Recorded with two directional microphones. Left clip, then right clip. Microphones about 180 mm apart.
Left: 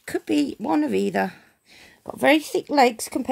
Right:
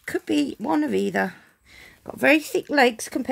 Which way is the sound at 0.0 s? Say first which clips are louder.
Left 1 dB; 5° left (ahead or behind).